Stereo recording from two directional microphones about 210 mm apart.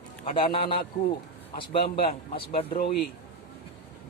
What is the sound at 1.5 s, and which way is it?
Speech, 25° left (ahead or behind).